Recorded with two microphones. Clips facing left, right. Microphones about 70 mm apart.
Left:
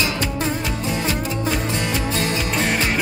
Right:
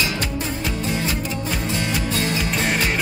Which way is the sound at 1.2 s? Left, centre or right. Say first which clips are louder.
Left 3 dB; left.